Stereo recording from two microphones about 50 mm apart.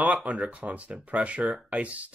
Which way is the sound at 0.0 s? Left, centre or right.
Right.